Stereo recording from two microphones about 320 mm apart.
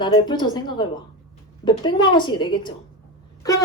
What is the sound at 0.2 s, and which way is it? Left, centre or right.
A woman's voice, centre.